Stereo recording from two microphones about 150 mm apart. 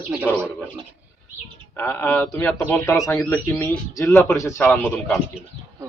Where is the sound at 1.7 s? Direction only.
15° left (ahead or behind).